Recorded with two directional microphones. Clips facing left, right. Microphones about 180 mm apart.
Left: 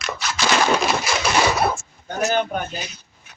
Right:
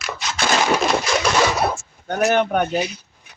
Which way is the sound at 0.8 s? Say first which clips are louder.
Right 2 dB; 5° left (ahead or behind).